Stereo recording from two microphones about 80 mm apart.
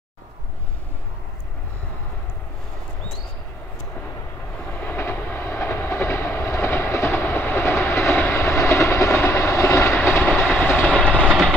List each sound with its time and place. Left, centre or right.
4.7 s vehicle: left
8.4 s train: left
9.1 s vehicle: left
10.0 s train: left; by 11.2 s centre